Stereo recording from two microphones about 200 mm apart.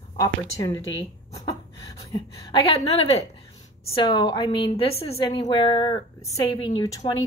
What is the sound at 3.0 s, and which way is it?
A woman's voice, 30° left (ahead or behind).